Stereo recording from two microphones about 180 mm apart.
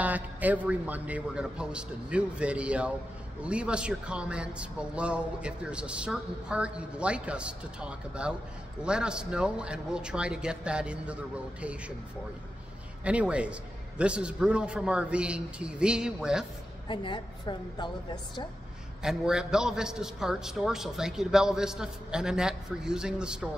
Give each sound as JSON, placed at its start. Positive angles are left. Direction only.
{"t": 0.0, "sound": "speech", "side_deg": -10}
{"t": 13.0, "sound": "speech", "side_deg": -5}
{"t": 16.8, "sound": "a woman's voice", "side_deg": 25}
{"t": 19.0, "sound": "speech", "side_deg": -5}